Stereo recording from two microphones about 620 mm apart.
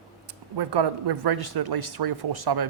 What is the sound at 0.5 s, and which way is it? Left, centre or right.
Speech, right.